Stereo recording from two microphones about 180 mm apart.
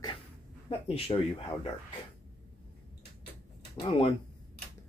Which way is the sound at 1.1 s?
30° left (ahead or behind).